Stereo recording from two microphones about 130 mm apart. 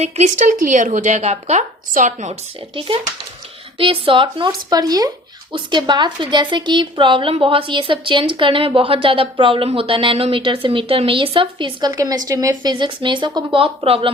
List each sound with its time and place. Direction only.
0.0 s a woman's voice: 65° right (ahead or behind); by 0.9 s 85° right
0.9 s a woman's voice: 70° right (ahead or behind)
2.7 s speech: 45° right (ahead or behind)
4.7 s speech: 30° right (ahead or behind)
11.9 s speech: 25° right (ahead or behind)
13.6 s speech: 45° right (ahead or behind)